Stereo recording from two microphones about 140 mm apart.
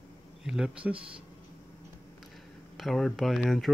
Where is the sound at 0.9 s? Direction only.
40° right (ahead or behind).